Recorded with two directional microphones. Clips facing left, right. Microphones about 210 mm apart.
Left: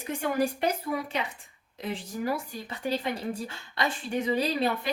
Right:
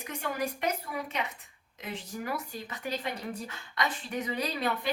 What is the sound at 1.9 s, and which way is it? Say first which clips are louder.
Speech: left 5 dB; 30° left (ahead or behind).